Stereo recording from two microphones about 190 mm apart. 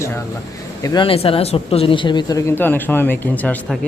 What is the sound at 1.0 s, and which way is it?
Speech, 30° left (ahead or behind).